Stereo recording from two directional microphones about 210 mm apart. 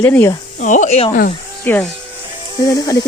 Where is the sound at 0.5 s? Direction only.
35° left (ahead or behind).